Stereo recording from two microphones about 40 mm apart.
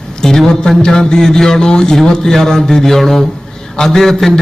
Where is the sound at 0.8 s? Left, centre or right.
Centre.